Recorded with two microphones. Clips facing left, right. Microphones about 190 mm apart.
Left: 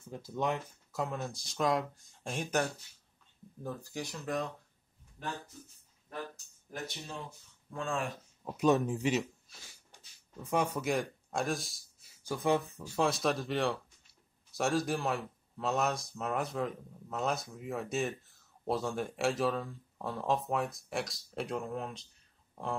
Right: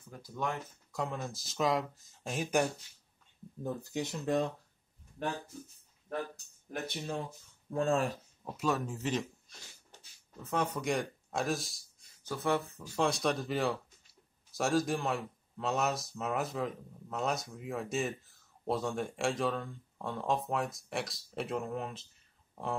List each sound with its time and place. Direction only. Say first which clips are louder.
0.1 s speech: left 3 dB; 20° left (ahead or behind)
0.9 s speech: left 1 dB; centre (ahead or behind)
3.6 s speech: right 4 dB; 20° right (ahead or behind)
7.7 s speech: right 6 dB; 40° right (ahead or behind)
8.5 s speech: left 6 dB; 20° left (ahead or behind)
12.9 s speech: even; centre (ahead or behind)